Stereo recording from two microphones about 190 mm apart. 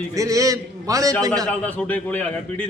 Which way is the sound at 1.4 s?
5° left (ahead or behind).